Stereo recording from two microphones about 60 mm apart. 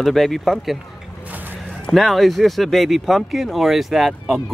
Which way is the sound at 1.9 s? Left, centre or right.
Centre.